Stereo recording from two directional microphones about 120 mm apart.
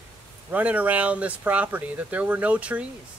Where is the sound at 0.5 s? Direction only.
10° right (ahead or behind).